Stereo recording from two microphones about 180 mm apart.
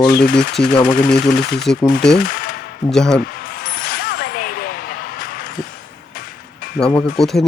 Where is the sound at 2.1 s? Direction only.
50° left (ahead or behind).